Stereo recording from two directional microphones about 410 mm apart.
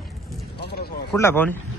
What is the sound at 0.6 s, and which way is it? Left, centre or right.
Speech, left.